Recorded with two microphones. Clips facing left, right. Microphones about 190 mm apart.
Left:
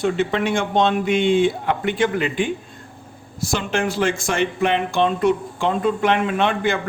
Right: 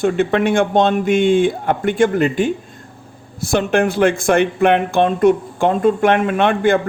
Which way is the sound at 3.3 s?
60° right (ahead or behind).